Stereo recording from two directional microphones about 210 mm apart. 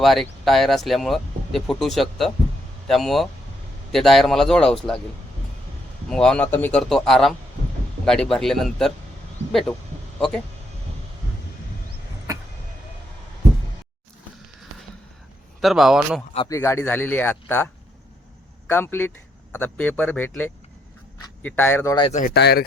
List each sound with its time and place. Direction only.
0.0 s speech: centre (ahead or behind)
6.1 s speech: 5° left (ahead or behind)
15.6 s speech: centre (ahead or behind)
16.5 s speech: 15° left (ahead or behind)
18.7 s speech: 10° left (ahead or behind)
22.4 s speech: 50° left (ahead or behind)